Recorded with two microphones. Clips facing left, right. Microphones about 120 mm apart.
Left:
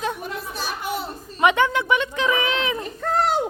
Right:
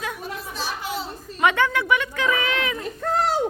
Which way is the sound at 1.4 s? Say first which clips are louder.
Left 2 dB; 20° left (ahead or behind).